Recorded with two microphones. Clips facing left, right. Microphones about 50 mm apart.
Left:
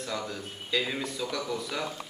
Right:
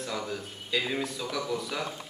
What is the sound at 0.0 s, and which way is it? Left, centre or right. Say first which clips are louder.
A man's voice: right 1 dB; centre.